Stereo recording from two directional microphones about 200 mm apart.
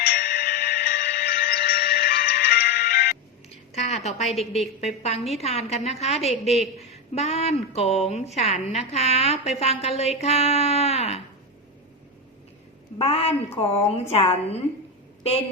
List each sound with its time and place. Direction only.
0.0 s music: 45° left (ahead or behind)
3.5 s a sound: 35° left (ahead or behind)
4.8 s a woman's voice: 30° left (ahead or behind)
13.0 s a woman's voice: 30° left (ahead or behind)